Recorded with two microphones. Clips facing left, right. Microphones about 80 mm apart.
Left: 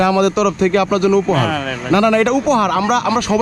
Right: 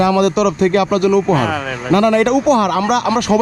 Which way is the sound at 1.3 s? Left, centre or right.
Centre.